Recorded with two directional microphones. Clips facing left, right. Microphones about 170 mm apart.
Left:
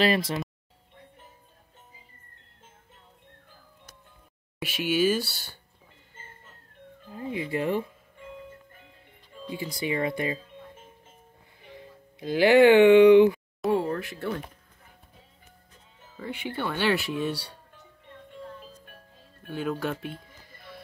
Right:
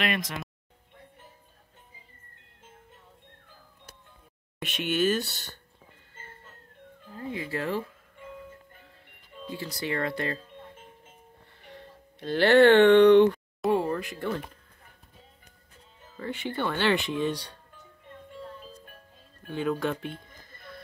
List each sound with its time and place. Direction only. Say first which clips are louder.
0.0 s speech: left 6 dB; 30° left (ahead or behind)
4.6 s speech: left 2 dB; 5° left (ahead or behind)
7.1 s speech: left 3 dB; 15° left (ahead or behind)
9.5 s speech: left 2 dB; 15° left (ahead or behind)
11.7 s speech: left 1 dB; 10° left (ahead or behind)
13.6 s a sound: even; 5° left (ahead or behind)
14.1 s speech: even; 5° left (ahead or behind)
16.2 s speech: right 1 dB; 10° left (ahead or behind)
19.5 s a sound: right 1 dB; centre (ahead or behind)